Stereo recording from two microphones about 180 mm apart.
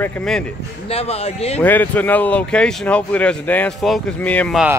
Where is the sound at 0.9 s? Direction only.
35° left (ahead or behind).